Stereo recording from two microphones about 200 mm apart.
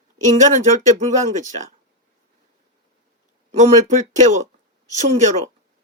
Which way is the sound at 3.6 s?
35° right (ahead or behind).